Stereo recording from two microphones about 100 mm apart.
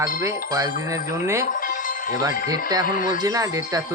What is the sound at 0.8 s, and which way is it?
Speech, 25° right (ahead or behind).